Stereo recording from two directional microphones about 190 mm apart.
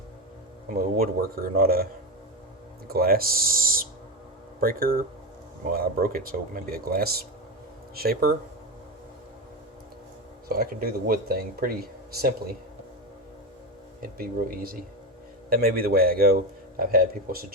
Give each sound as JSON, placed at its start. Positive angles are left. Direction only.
{"t": 0.8, "sound": "speech", "side_deg": -50}
{"t": 10.5, "sound": "speech", "side_deg": -50}
{"t": 14.0, "sound": "speech", "side_deg": -50}